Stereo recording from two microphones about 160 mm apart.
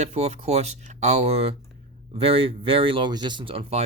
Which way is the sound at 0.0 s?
40° right (ahead or behind).